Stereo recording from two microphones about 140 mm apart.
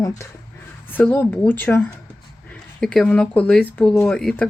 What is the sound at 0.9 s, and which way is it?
Speech, 15° left (ahead or behind).